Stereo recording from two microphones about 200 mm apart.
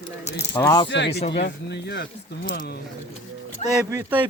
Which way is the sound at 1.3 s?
60° left (ahead or behind).